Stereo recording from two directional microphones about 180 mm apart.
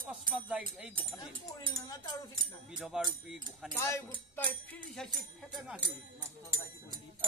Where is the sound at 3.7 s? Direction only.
15° left (ahead or behind).